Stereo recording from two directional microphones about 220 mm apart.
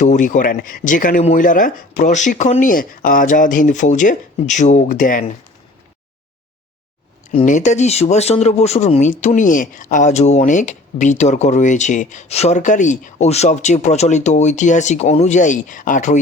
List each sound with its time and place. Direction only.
0.0 s speech: 35° left (ahead or behind)
7.3 s speech: 35° left (ahead or behind)